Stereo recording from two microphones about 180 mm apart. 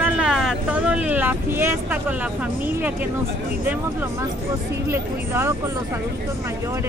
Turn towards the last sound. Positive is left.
turn(degrees=-15)  # may be behind; listen again after turning